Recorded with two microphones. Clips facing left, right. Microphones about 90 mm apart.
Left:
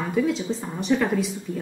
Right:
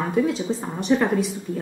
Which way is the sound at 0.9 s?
25° right (ahead or behind).